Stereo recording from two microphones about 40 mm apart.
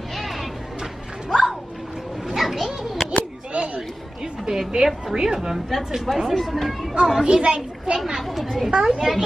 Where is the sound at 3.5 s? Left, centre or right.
Right.